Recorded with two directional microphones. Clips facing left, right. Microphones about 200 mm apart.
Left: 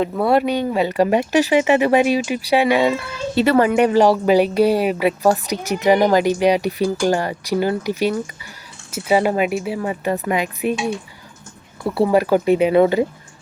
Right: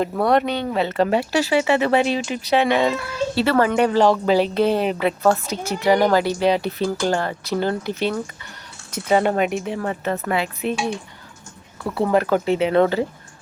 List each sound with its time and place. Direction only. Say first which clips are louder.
0.0 s speech: left 2 dB; 5° left (ahead or behind)